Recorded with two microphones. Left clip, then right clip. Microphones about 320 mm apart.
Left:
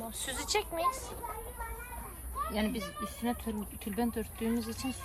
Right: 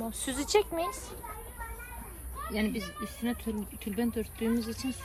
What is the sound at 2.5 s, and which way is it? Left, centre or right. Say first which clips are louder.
Speech: right 6 dB; centre.